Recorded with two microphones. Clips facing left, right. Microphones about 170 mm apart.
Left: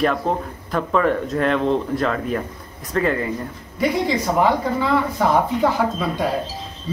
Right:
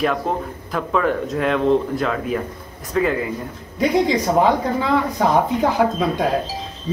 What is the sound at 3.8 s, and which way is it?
A woman's voice, 20° right (ahead or behind).